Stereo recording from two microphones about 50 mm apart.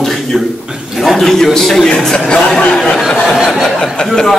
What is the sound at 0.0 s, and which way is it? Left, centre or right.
Chuckle, centre.